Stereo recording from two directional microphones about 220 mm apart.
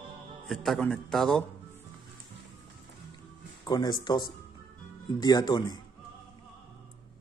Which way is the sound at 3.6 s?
20° left (ahead or behind).